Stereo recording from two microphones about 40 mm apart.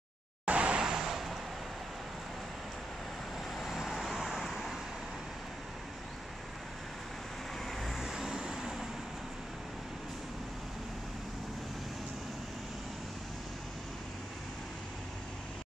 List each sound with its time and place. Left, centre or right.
0.5 s vehicle: right
0.8 s vehicle: centre
3.5 s vehicle: centre
7.6 s vehicle: centre
8.1 s vehicle: centre